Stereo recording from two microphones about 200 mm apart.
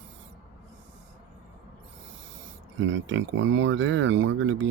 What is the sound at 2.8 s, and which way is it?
Speech, 70° right (ahead or behind).